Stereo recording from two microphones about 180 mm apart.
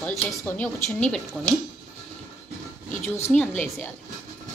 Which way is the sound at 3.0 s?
15° left (ahead or behind).